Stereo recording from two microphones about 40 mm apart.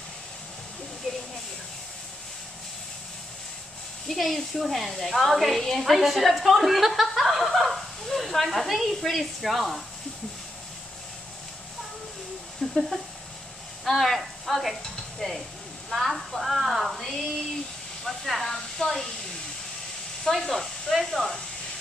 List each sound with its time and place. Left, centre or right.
4.1 s a woman's voice: centre
12.6 s a sound: centre
13.8 s speech: centre
15.9 s a woman's voice: centre
18.8 s speech: centre
20.2 s a woman's voice: centre